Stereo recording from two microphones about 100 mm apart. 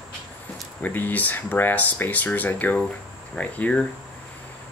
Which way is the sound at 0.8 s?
20° left (ahead or behind).